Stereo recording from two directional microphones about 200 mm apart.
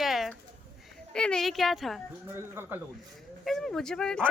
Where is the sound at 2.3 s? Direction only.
10° right (ahead or behind).